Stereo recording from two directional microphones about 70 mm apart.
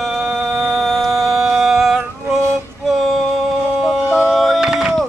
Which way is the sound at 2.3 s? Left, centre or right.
Right.